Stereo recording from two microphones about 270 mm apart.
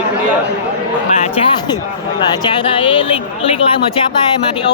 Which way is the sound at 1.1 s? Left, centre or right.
Left.